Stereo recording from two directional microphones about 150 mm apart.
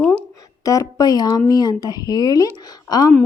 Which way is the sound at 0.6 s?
20° left (ahead or behind).